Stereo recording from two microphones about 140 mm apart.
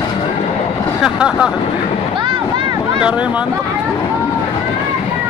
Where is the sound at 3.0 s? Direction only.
10° right (ahead or behind).